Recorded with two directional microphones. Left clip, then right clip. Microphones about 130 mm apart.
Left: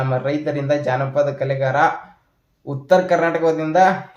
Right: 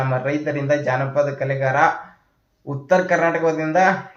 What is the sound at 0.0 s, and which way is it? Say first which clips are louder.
Speech: left 1 dB; 20° left (ahead or behind).